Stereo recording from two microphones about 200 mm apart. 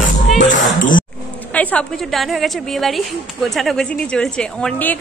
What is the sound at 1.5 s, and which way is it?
A woman's voice, 5° left (ahead or behind).